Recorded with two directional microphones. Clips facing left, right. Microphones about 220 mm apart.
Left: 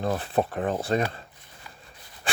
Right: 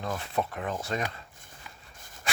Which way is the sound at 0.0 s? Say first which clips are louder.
Left 6 dB; 35° left (ahead or behind).